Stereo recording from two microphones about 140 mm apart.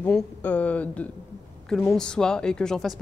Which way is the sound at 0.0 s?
10° left (ahead or behind).